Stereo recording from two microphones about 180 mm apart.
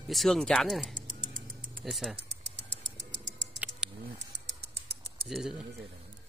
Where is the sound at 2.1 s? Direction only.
75° right (ahead or behind).